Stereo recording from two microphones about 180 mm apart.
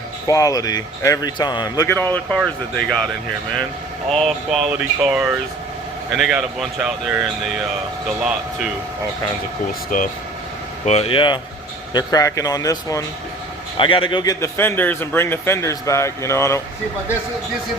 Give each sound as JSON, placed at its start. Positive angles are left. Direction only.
{"t": 0.3, "sound": "speech", "side_deg": 20}
{"t": 4.1, "sound": "speech", "side_deg": 0}
{"t": 9.9, "sound": "speech", "side_deg": 50}
{"t": 10.8, "sound": "a man's voice", "side_deg": 35}